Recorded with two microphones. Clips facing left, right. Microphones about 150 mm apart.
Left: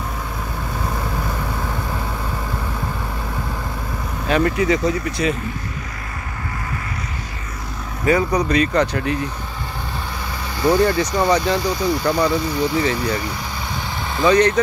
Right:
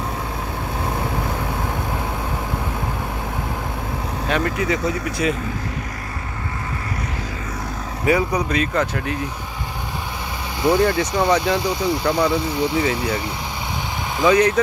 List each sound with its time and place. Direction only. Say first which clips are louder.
4.3 s speech: left 4 dB; centre (ahead or behind)
8.0 s speech: left 2 dB; 10° right (ahead or behind)
10.6 s speech: left 1 dB; 20° right (ahead or behind)
11.2 s speech: even; centre (ahead or behind)
11.5 s speech: left 1 dB; 25° right (ahead or behind)
14.1 s speech: left 1 dB; 5° right (ahead or behind)